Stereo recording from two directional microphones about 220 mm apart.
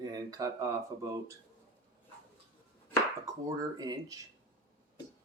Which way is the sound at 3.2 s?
15° right (ahead or behind).